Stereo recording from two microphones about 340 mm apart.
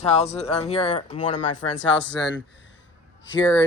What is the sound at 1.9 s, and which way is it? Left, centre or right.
Speech, left.